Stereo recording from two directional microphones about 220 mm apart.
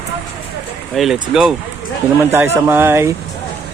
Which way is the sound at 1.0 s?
Centre (ahead or behind).